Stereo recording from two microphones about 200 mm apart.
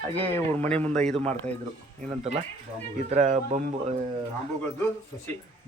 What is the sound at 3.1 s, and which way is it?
Speech, 35° right (ahead or behind).